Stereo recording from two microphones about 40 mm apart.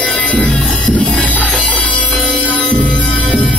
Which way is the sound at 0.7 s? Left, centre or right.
Left.